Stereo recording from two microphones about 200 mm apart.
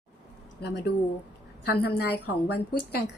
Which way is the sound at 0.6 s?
55° left (ahead or behind).